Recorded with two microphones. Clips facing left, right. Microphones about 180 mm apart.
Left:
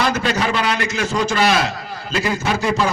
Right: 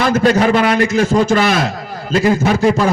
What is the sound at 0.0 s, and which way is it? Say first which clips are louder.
Speech: right 7 dB; 50° right (ahead or behind).